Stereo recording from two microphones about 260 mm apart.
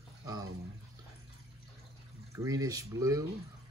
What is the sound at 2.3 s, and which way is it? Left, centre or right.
Speech, centre.